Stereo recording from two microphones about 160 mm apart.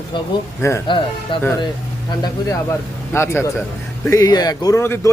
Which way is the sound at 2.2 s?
20° left (ahead or behind).